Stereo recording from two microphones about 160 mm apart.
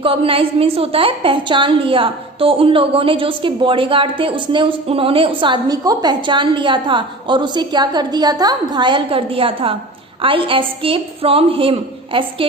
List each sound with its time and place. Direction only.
0.0 s a woman's voice: 35° right (ahead or behind)